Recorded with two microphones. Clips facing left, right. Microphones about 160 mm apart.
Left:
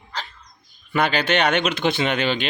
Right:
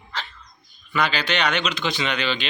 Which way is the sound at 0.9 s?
50° left (ahead or behind).